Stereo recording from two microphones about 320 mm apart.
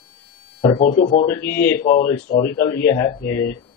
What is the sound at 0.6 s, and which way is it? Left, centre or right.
Speech, centre.